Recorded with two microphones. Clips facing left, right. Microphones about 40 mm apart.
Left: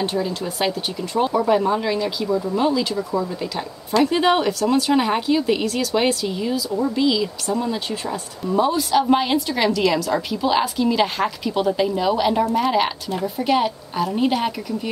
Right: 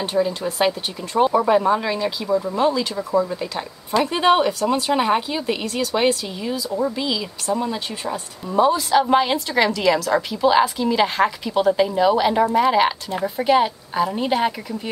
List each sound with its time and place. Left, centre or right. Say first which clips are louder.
0.0 s speech: right 2 dB; centre
5.7 s speech: left 1 dB; right
6.2 s speech: left 3 dB; centre